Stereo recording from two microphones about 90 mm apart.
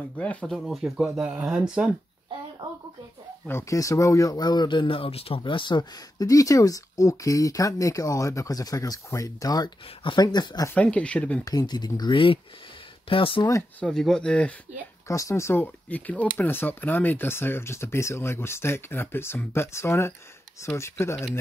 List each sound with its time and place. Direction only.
0.2 s speech: 15° left (ahead or behind)
0.5 s speech: centre (ahead or behind)
1.0 s speech: 15° right (ahead or behind)
3.4 s speech: 30° left (ahead or behind)
10.1 s speech: 50° left (ahead or behind)
10.7 s speech: 15° left (ahead or behind)
11.4 s speech: 50° left (ahead or behind)
12.0 s speech: 65° left (ahead or behind)
13.1 s speech: 80° left
13.7 s speech: 10° left (ahead or behind)
15.0 s speech: 35° left (ahead or behind)
15.6 s speech: 15° left (ahead or behind)